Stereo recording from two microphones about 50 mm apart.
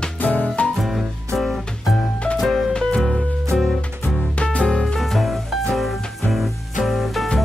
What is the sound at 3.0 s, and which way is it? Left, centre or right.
Music, centre.